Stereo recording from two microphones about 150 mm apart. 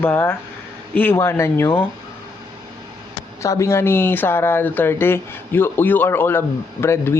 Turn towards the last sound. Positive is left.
turn(degrees=15)  # may be behind; listen again after turning